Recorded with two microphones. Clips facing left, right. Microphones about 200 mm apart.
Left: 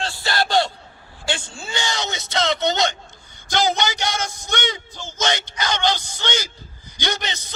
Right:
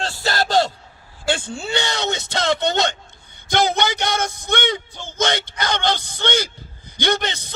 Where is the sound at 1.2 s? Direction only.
55° right (ahead or behind).